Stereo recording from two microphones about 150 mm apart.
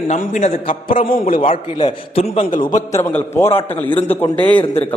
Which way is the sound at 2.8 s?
20° left (ahead or behind).